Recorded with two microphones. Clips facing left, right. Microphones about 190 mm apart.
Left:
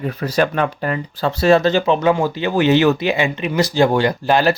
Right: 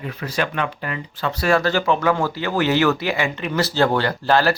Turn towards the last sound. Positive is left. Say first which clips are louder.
# left 3 dB
turn(degrees=15)  # may be behind; listen again after turning